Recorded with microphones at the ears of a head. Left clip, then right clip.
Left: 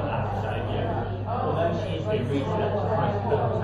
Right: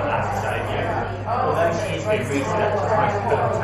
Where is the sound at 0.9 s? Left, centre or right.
Right.